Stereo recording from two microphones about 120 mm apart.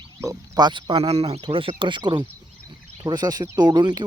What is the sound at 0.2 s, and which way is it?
Speech, 30° right (ahead or behind).